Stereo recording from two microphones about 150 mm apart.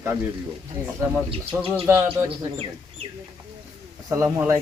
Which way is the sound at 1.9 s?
15° right (ahead or behind).